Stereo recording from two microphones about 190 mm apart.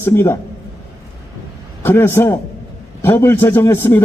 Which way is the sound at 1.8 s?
10° left (ahead or behind).